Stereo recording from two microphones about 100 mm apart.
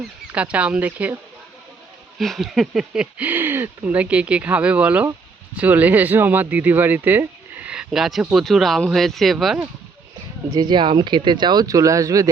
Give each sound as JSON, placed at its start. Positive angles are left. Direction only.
{"t": 0.3, "sound": "speech", "side_deg": -10}
{"t": 2.1, "sound": "speech", "side_deg": 0}
{"t": 10.5, "sound": "speech", "side_deg": -45}